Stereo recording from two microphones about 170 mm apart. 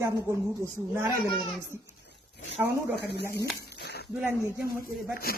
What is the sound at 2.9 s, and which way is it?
Speech, 75° left (ahead or behind).